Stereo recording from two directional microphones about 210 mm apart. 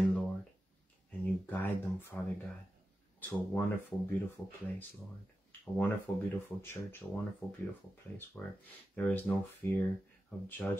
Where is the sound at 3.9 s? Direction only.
20° left (ahead or behind).